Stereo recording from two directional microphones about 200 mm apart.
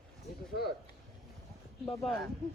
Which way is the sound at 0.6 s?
50° left (ahead or behind).